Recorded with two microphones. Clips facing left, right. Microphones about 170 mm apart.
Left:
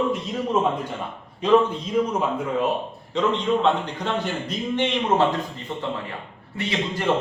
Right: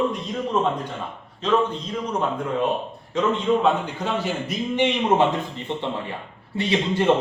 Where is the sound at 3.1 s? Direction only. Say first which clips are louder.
Right 1 dB; 5° right (ahead or behind).